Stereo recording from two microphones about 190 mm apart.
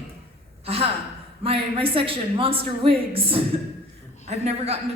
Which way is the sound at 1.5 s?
30° right (ahead or behind).